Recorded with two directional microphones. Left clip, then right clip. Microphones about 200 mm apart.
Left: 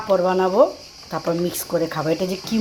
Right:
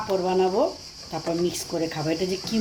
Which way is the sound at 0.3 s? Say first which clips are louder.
Left 4 dB; 15° left (ahead or behind).